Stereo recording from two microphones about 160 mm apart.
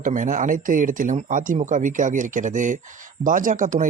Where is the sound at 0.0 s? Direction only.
55° right (ahead or behind).